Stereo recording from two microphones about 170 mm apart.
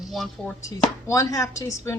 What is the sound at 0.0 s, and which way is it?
Speech, centre (ahead or behind).